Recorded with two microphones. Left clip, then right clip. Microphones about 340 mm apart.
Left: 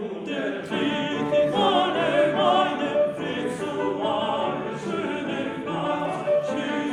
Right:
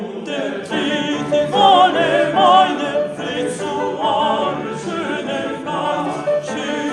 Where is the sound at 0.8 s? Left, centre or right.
Centre.